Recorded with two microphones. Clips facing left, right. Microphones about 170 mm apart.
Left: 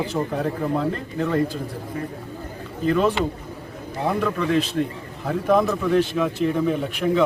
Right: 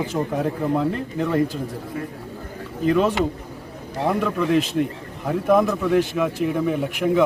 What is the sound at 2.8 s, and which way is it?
Speech, 15° right (ahead or behind).